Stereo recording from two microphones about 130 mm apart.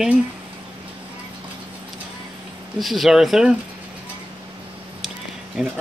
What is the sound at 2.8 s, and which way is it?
Speech, centre (ahead or behind).